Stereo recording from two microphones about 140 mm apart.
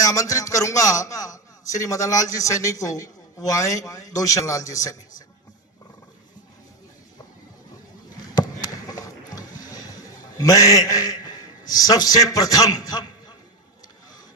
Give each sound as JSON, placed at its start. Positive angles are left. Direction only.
{"t": 0.0, "sound": "a man's voice", "side_deg": 25}
{"t": 8.2, "sound": "a sound", "side_deg": 30}
{"t": 9.6, "sound": "a man's voice", "side_deg": 25}